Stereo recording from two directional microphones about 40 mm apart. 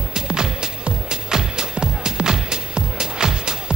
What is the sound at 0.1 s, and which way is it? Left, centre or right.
Music, centre.